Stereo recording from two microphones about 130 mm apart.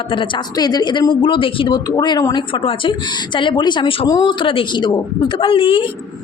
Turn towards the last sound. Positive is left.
turn(degrees=45)  # may be behind; listen again after turning